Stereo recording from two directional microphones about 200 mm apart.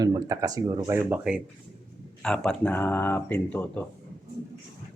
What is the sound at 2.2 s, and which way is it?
Speech, 5° left (ahead or behind).